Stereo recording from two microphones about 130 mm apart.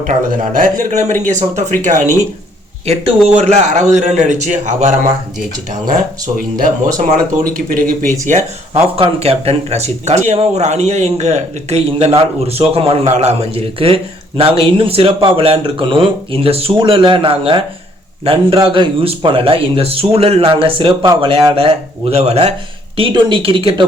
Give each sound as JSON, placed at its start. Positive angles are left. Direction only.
{"t": 0.1, "sound": "a man's voice", "side_deg": -80}
{"t": 3.2, "sound": "a man's voice", "side_deg": -60}
{"t": 7.4, "sound": "speech", "side_deg": -90}
{"t": 8.2, "sound": "a man's voice", "side_deg": -65}
{"t": 9.0, "sound": "speech", "side_deg": -50}
{"t": 23.0, "sound": "speech", "side_deg": -40}